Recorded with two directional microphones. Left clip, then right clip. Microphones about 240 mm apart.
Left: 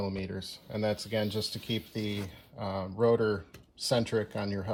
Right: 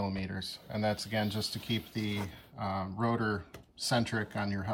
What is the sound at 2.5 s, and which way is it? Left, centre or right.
Speech, left.